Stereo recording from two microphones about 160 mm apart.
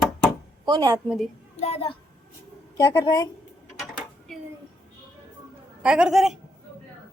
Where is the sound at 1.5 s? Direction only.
40° left (ahead or behind).